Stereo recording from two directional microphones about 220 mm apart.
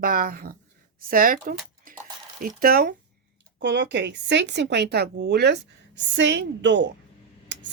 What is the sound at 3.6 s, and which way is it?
Speech, 55° right (ahead or behind).